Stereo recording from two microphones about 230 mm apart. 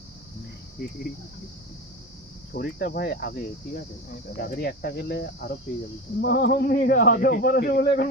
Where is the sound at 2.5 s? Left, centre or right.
Left.